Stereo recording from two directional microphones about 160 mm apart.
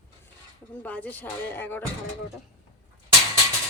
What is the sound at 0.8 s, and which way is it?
Speech, 10° left (ahead or behind).